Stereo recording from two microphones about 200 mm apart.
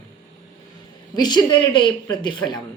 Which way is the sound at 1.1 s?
20° left (ahead or behind).